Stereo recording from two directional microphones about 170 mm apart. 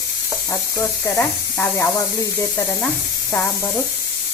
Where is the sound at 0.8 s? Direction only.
15° left (ahead or behind).